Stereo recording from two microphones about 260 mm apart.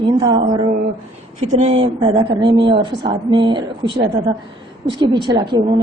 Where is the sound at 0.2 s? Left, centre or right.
Centre.